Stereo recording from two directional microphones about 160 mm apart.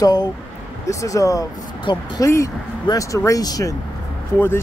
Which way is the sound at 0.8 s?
20° left (ahead or behind).